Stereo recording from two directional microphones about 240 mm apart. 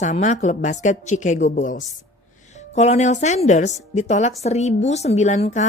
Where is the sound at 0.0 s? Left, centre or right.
Left.